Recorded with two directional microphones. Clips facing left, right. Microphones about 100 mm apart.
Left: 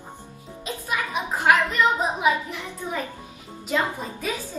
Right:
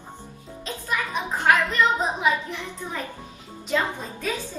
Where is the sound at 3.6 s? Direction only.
5° left (ahead or behind).